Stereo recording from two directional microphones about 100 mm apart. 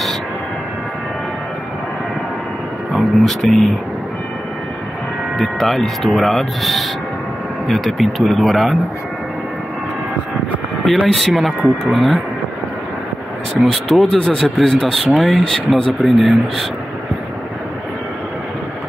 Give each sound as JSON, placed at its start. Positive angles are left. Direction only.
{"t": 2.9, "sound": "speech", "side_deg": 0}
{"t": 5.4, "sound": "speech", "side_deg": 0}
{"t": 11.1, "sound": "speech", "side_deg": 0}
{"t": 13.6, "sound": "speech", "side_deg": 0}